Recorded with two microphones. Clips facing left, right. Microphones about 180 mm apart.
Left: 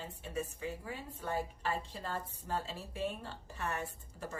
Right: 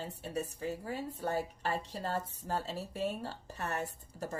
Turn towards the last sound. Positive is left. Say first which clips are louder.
# right 3 dB
turn(degrees=-40)  # may be behind; listen again after turning